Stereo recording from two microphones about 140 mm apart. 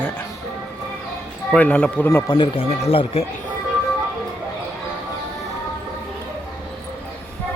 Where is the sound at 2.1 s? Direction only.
35° left (ahead or behind).